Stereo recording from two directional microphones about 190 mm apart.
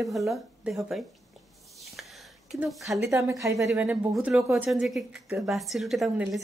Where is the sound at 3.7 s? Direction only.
5° right (ahead or behind).